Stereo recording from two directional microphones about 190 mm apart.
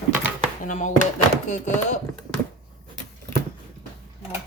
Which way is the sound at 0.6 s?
40° left (ahead or behind).